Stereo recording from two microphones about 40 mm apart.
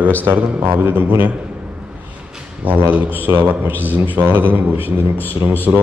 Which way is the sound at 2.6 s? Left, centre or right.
Right.